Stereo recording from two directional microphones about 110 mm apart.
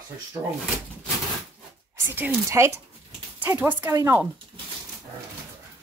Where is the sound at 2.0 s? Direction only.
15° right (ahead or behind).